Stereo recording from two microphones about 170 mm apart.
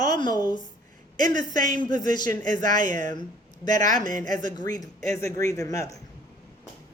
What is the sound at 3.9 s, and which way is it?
Speech, 25° left (ahead or behind).